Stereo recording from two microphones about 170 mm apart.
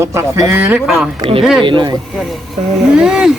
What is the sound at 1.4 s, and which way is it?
Speech, centre (ahead or behind).